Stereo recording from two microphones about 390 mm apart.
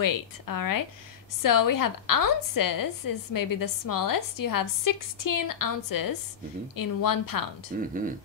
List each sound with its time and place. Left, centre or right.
0.0 s a woman's voice: left
7.7 s speech: right